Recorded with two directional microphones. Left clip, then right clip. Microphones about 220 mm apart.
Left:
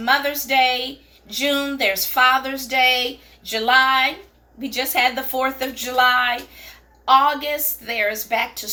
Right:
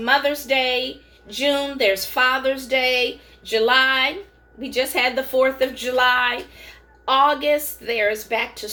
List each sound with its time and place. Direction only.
0.0 s a woman's voice: centre (ahead or behind)